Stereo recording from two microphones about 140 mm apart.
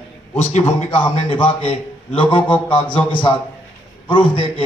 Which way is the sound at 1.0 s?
40° left (ahead or behind).